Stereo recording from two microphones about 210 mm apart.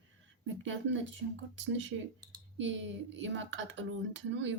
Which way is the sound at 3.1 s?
60° right (ahead or behind).